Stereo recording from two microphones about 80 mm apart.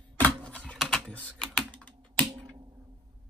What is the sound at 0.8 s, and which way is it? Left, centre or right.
Typing, centre.